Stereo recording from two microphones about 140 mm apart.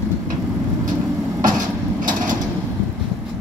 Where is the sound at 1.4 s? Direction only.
70° right (ahead or behind).